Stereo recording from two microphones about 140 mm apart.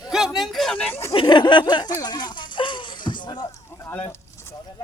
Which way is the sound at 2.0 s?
30° left (ahead or behind).